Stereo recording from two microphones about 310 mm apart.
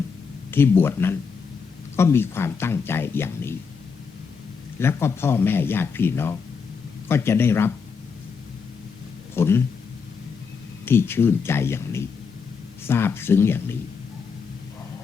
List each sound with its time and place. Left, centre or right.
0.5 s speech: centre
4.8 s speech: centre
9.3 s speech: centre
10.8 s speech: centre